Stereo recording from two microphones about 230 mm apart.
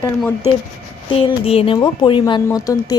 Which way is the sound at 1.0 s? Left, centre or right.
Left.